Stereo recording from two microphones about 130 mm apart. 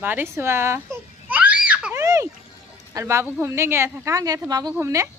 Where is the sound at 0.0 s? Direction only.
15° right (ahead or behind).